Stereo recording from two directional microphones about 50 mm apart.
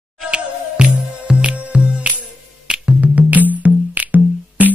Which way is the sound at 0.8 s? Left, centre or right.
Centre.